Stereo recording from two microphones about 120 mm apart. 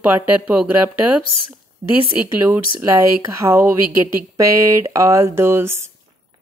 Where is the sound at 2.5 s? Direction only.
25° right (ahead or behind).